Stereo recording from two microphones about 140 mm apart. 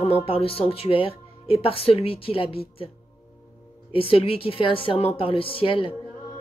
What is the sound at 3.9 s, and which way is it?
Speech, 40° left (ahead or behind).